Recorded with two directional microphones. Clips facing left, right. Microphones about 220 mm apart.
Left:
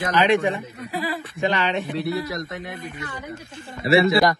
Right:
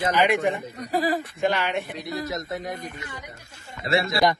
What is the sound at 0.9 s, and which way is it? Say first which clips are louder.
Speech: right 4 dB; 45° right (ahead or behind).